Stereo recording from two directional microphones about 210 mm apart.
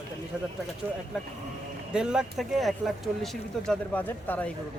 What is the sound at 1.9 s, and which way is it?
Speech, 5° right (ahead or behind).